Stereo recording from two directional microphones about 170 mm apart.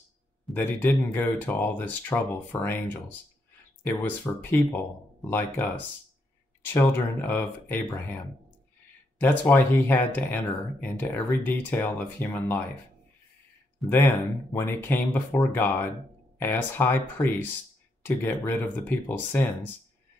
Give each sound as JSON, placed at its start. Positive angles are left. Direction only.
{"t": 0.6, "sound": "speech", "side_deg": 10}
{"t": 9.2, "sound": "speech", "side_deg": 10}
{"t": 13.8, "sound": "speech", "side_deg": 15}